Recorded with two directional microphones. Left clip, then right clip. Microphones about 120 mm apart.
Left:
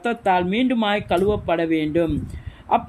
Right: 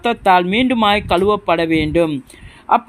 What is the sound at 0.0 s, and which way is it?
Speech, 30° right (ahead or behind).